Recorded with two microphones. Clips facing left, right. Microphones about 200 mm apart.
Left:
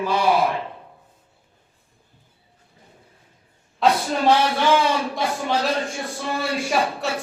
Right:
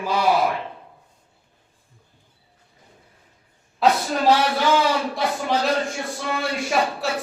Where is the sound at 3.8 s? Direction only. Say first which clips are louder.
Even; 5° right (ahead or behind).